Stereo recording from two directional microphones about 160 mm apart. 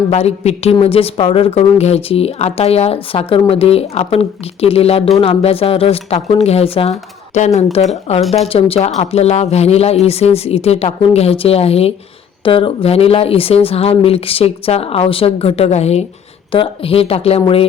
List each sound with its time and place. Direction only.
0.1 s a woman's voice: 40° left (ahead or behind)